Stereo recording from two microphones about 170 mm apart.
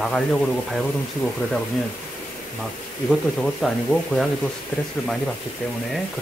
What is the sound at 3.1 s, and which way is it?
Speech, 5° left (ahead or behind).